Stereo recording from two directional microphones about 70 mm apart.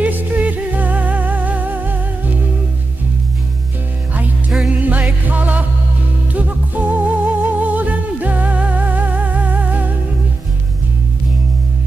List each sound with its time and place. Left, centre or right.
0.0 s music: right
4.6 s music: right